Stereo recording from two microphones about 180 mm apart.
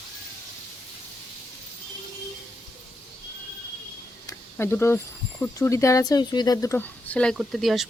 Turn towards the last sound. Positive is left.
turn(degrees=0)  # may be behind; listen again after turning